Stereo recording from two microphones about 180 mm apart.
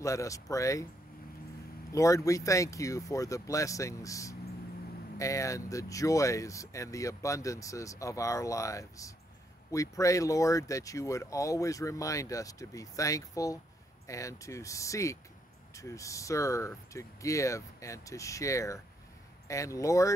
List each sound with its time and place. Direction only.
0.0 s speech: 20° left (ahead or behind)
1.9 s speech: 15° left (ahead or behind)